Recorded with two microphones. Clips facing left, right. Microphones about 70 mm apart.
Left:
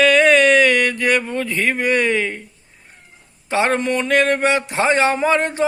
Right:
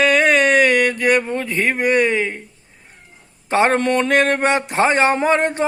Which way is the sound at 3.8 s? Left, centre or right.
Right.